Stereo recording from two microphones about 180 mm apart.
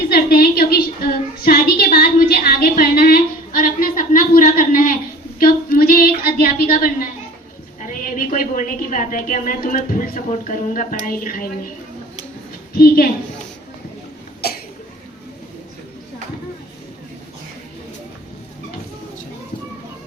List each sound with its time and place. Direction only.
0.1 s a woman's voice: 60° left (ahead or behind)
5.4 s a sound: 55° left (ahead or behind)
7.8 s a woman's voice: 50° left (ahead or behind)
12.7 s a woman's voice: 55° left (ahead or behind)